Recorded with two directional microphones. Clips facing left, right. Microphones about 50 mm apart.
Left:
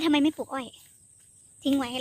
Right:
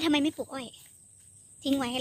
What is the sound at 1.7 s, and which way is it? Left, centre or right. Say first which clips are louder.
Speech: even; centre.